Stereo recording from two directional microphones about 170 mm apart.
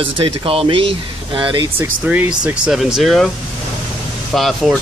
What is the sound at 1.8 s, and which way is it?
Speech, 10° right (ahead or behind).